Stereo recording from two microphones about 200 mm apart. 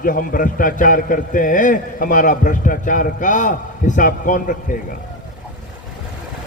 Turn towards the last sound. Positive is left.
turn(degrees=40)  # may be behind; listen again after turning